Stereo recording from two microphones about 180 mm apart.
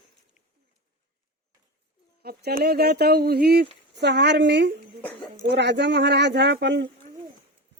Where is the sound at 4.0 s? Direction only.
70° right (ahead or behind).